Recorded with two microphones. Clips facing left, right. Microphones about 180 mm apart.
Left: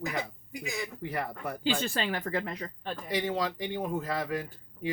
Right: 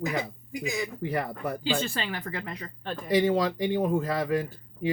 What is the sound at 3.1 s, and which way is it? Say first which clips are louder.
Speech: right 8 dB; 40° right (ahead or behind).